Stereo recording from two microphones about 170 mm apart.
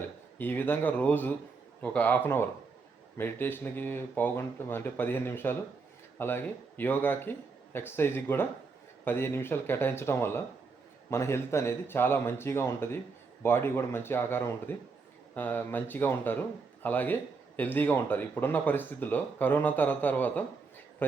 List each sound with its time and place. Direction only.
0.3 s speech: 10° left (ahead or behind)